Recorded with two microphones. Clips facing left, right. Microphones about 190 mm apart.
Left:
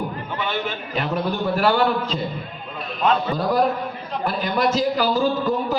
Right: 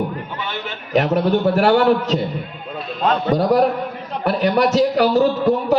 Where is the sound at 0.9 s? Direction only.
75° right (ahead or behind).